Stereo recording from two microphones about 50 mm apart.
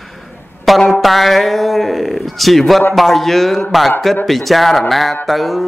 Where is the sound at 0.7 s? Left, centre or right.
Centre.